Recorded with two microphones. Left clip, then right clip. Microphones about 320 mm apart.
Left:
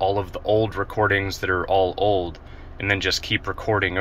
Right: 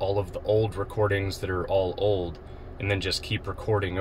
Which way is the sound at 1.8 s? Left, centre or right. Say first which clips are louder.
Left 3 dB; centre.